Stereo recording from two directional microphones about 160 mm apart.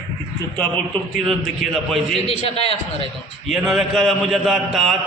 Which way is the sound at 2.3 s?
40° left (ahead or behind).